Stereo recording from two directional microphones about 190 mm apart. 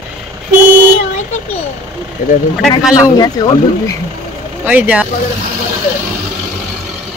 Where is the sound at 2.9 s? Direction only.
20° left (ahead or behind).